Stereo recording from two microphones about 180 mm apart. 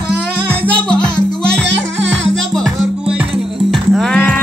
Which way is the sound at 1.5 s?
85° right.